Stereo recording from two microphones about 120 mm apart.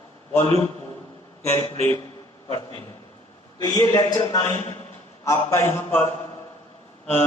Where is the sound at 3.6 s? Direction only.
35° left (ahead or behind); by 6.1 s 20° left (ahead or behind).